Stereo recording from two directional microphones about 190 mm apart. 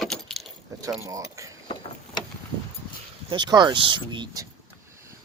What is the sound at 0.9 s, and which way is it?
Speech, 15° right (ahead or behind).